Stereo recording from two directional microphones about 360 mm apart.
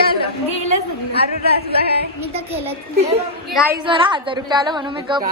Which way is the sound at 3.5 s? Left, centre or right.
Centre.